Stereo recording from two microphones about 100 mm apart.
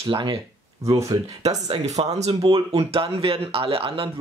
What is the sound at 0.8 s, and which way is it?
Speech, 35° right (ahead or behind).